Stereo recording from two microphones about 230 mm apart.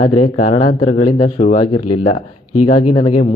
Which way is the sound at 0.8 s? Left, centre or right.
Left.